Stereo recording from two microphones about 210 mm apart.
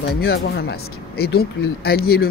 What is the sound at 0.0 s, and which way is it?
Speech, 50° left (ahead or behind).